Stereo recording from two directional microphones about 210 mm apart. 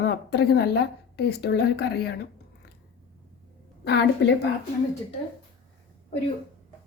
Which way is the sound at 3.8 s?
55° left (ahead or behind).